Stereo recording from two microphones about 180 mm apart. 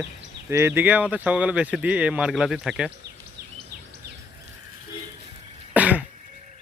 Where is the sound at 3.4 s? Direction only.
60° right (ahead or behind).